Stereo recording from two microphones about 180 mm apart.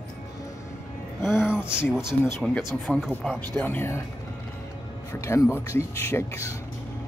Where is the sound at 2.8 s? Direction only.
Centre (ahead or behind).